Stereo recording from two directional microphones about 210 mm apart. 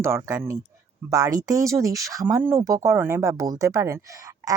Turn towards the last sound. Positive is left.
turn(degrees=-15)  # may be behind; listen again after turning